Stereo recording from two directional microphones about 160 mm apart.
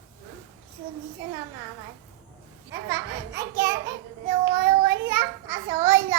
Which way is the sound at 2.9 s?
20° right (ahead or behind).